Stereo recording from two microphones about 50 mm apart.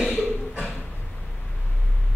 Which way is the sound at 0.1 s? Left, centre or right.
Right.